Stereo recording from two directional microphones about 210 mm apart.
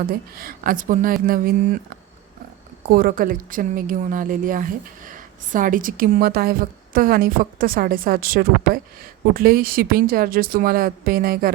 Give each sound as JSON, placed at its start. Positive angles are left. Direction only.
{"t": 0.0, "sound": "speech", "side_deg": -45}
{"t": 2.9, "sound": "speech", "side_deg": -45}